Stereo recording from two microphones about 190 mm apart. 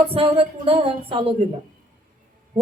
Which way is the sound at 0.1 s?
30° right (ahead or behind).